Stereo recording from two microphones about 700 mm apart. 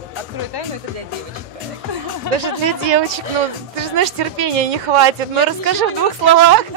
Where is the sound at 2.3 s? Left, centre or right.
Right.